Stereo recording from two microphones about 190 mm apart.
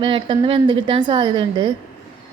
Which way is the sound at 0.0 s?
25° right (ahead or behind).